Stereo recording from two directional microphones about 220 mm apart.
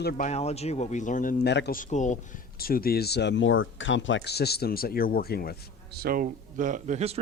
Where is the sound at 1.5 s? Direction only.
50° left (ahead or behind).